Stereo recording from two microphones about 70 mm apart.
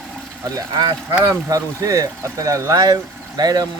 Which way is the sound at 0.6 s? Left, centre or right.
Right.